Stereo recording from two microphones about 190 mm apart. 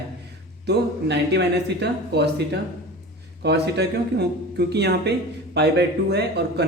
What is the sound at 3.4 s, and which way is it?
A man's voice, 60° right (ahead or behind).